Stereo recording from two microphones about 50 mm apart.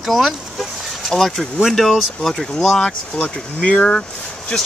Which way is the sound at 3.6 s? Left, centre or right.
Left.